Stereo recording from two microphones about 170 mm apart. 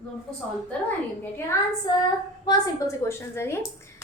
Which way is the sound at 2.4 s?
15° left (ahead or behind).